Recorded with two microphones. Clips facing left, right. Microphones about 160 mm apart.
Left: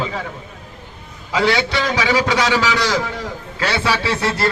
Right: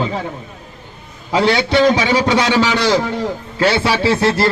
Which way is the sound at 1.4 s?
25° right (ahead or behind).